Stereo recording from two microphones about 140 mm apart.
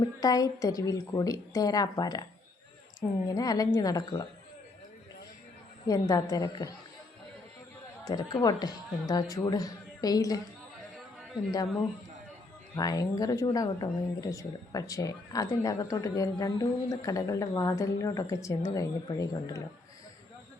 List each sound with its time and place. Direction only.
0.0 s speech: 25° left (ahead or behind)
3.2 s speech: 25° left (ahead or behind)
5.9 s speech: 25° left (ahead or behind)
8.0 s speech: 30° left (ahead or behind)
12.7 s speech: 25° left (ahead or behind)